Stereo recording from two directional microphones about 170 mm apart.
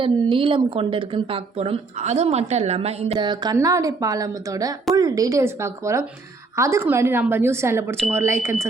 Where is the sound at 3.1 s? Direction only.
25° right (ahead or behind).